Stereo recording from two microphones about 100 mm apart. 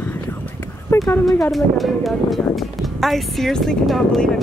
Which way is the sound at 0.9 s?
25° left (ahead or behind).